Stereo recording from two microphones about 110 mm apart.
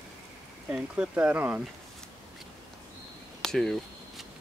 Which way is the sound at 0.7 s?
10° right (ahead or behind).